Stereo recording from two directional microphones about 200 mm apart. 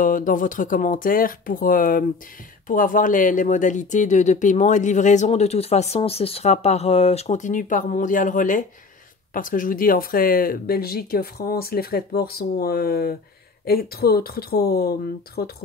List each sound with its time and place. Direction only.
0.0 s speech: 40° left (ahead or behind)